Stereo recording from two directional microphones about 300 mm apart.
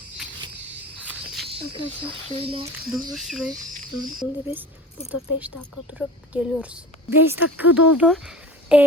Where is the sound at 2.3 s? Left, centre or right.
Centre.